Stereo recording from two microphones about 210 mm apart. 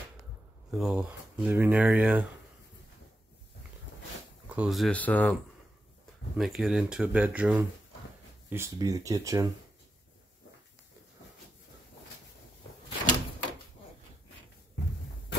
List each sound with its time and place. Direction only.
0.7 s speech: centre (ahead or behind)
4.5 s speech: 5° right (ahead or behind)